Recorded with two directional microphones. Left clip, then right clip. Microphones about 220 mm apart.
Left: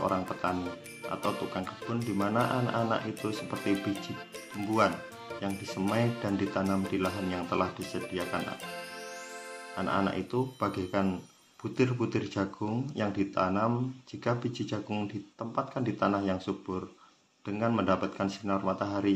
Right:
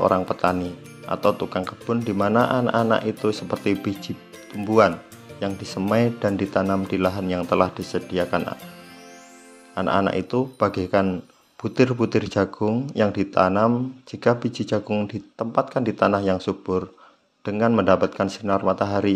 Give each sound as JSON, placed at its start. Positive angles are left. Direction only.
{"t": 0.0, "sound": "speech", "side_deg": -40}
{"t": 5.4, "sound": "speech", "side_deg": -40}
{"t": 9.8, "sound": "speech", "side_deg": -40}